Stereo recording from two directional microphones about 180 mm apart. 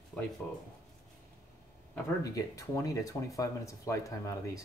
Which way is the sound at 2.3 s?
20° left (ahead or behind).